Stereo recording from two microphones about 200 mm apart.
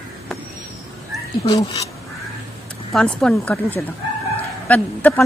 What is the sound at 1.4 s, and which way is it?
Speech, 20° left (ahead or behind).